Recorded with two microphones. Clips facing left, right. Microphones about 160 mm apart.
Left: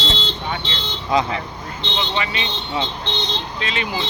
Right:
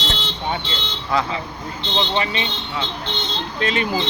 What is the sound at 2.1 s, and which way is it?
Speech, 35° right (ahead or behind).